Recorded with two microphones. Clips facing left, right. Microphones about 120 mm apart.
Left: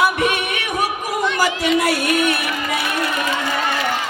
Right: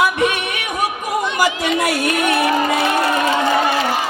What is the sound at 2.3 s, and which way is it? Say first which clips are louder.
Crowd: right 6 dB; 30° right (ahead or behind).